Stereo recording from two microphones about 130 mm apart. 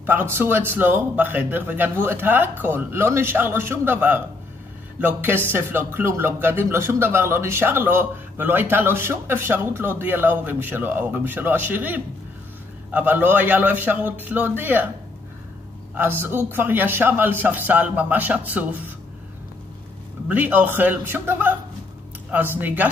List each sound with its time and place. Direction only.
0.0 s speech: 15° right (ahead or behind)
15.9 s speech: 15° right (ahead or behind)
20.2 s speech: 15° right (ahead or behind)